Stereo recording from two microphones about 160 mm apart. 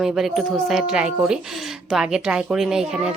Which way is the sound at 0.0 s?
Centre (ahead or behind).